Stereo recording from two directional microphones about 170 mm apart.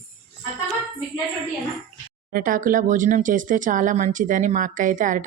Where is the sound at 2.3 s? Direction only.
55° right (ahead or behind).